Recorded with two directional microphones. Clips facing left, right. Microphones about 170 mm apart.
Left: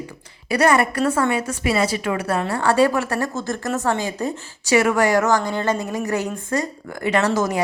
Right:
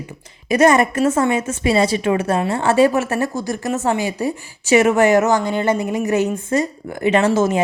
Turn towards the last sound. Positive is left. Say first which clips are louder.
# right 4 dB
turn(degrees=-25)  # may be behind; listen again after turning